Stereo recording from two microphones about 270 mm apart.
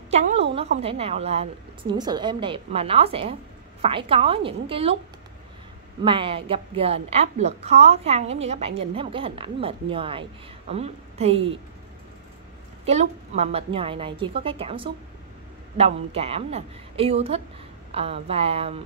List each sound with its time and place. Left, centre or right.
0.1 s a woman's voice: right
6.0 s a woman's voice: centre
12.8 s a woman's voice: right